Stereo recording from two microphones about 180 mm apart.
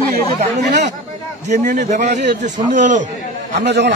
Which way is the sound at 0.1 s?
45° right (ahead or behind).